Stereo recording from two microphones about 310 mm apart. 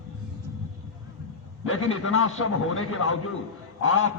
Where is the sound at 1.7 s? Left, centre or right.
Left.